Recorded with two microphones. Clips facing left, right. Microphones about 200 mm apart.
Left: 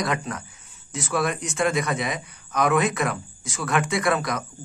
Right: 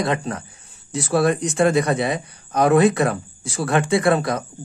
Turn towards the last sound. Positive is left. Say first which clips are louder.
# right 5 dB
turn(degrees=-30)  # may be behind; listen again after turning